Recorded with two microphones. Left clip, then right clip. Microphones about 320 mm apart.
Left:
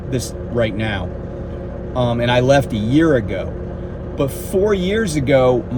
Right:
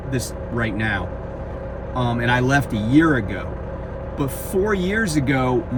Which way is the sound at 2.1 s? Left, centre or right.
Centre.